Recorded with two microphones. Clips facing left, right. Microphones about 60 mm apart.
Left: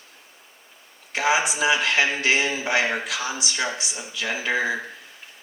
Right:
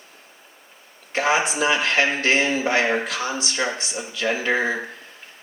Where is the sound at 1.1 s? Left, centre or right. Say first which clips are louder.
Right 1 dB; right.